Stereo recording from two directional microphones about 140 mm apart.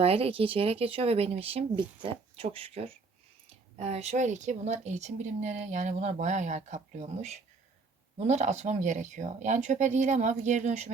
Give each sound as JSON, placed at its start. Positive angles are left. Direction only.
{"t": 0.0, "sound": "speech", "side_deg": -45}